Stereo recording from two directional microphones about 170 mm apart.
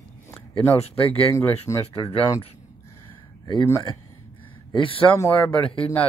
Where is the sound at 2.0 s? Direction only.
30° left (ahead or behind).